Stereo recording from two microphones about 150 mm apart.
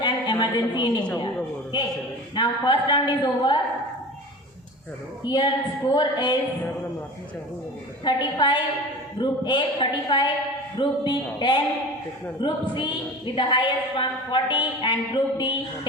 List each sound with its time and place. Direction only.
0.0 s a sound: 30° left (ahead or behind)
1.7 s a man's voice: 30° left (ahead or behind)
5.2 s a woman's voice: 30° left (ahead or behind)
8.0 s a woman's voice: 30° left (ahead or behind)